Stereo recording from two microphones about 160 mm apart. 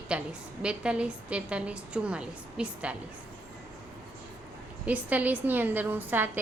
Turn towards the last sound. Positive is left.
turn(degrees=-10)  # may be behind; listen again after turning